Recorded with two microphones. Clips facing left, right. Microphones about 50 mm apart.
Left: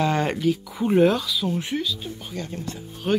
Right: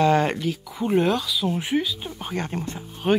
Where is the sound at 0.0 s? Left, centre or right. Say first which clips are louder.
Right 2 dB; centre.